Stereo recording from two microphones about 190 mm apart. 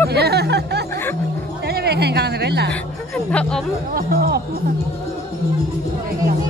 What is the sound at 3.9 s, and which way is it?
Speech, 50° right (ahead or behind).